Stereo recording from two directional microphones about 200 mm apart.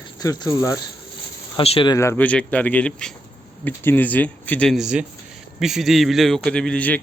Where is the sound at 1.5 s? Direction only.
25° left (ahead or behind).